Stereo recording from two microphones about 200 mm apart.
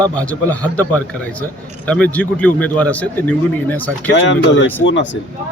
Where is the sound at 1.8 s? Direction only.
5° left (ahead or behind).